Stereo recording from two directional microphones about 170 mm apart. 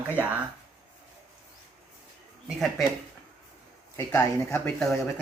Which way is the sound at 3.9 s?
15° left (ahead or behind).